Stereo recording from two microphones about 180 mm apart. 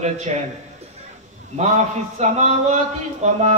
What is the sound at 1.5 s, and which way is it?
A man's voice, 40° right (ahead or behind).